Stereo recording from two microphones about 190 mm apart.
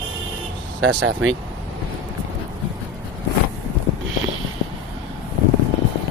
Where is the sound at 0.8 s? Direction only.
75° right (ahead or behind).